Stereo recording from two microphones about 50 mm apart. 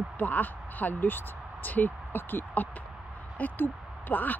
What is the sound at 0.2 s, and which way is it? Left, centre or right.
Speech, left.